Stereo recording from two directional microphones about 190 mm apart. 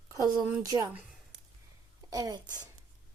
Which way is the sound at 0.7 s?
15° right (ahead or behind).